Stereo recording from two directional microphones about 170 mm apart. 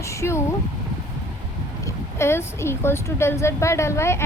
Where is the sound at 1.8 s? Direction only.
15° left (ahead or behind).